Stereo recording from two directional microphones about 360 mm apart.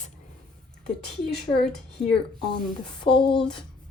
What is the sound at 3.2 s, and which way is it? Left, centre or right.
Speech, centre.